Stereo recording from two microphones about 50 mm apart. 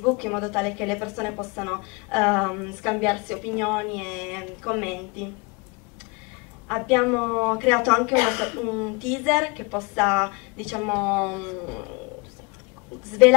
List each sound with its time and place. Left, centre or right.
0.0 s a woman's voice: centre
6.7 s a woman's voice: centre